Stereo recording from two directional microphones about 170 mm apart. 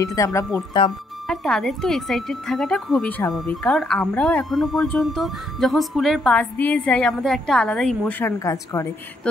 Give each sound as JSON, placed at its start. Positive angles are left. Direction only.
{"t": 0.0, "sound": "speech", "side_deg": 20}
{"t": 1.2, "sound": "speech", "side_deg": 5}